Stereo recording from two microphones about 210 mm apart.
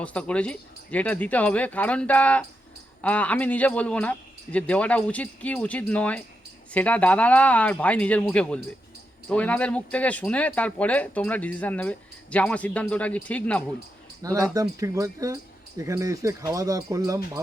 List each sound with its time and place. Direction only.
0.0 s speech: 5° left (ahead or behind)
14.2 s speech: 15° right (ahead or behind)